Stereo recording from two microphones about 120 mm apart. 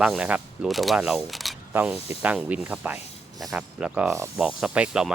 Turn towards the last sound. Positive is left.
turn(degrees=-10)  # may be behind; listen again after turning